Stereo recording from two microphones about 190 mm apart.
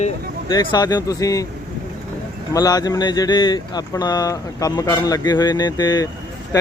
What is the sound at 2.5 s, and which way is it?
Speech, 20° left (ahead or behind).